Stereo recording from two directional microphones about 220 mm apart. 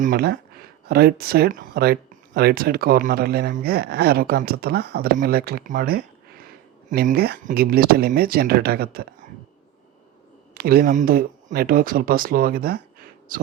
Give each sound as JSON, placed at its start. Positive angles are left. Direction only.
{"t": 0.0, "sound": "speech", "side_deg": -40}
{"t": 10.5, "sound": "speech", "side_deg": -45}